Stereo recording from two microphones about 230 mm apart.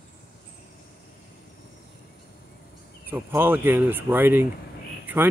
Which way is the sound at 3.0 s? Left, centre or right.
Centre.